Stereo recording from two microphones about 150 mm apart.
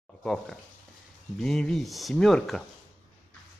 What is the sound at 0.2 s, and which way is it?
Speech, centre (ahead or behind).